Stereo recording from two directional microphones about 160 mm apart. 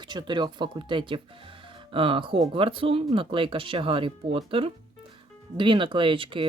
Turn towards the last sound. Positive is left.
turn(degrees=-30)  # may be behind; listen again after turning